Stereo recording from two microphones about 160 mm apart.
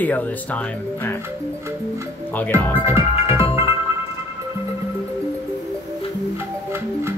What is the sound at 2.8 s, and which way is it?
Music, 15° right (ahead or behind).